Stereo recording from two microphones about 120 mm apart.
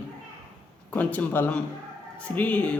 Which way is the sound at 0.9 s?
15° left (ahead or behind).